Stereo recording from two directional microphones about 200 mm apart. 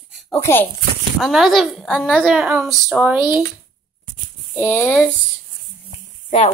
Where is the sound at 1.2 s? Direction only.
Centre (ahead or behind).